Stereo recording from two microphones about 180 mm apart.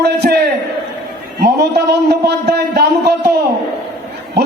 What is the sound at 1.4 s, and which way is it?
A man's voice, 65° right (ahead or behind).